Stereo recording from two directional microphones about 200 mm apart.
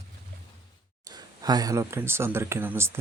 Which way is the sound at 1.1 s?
20° right (ahead or behind).